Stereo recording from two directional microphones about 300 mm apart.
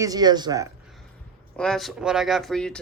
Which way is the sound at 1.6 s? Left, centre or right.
Centre.